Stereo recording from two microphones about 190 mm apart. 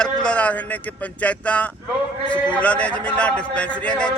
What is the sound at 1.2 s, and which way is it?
A man's voice, 5° left (ahead or behind).